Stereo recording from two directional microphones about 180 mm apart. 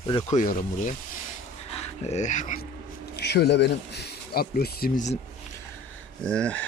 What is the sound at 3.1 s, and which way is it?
Speech, 65° left (ahead or behind).